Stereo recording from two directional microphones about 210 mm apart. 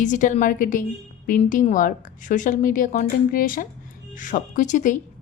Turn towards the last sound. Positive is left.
turn(degrees=35)  # may be behind; listen again after turning